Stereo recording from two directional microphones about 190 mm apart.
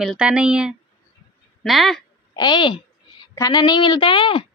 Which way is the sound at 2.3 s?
25° left (ahead or behind).